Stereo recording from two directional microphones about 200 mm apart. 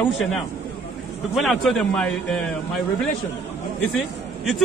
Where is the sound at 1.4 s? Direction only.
Centre (ahead or behind).